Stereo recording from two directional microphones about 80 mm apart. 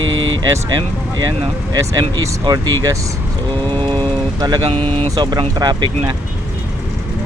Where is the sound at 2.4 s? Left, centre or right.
Right.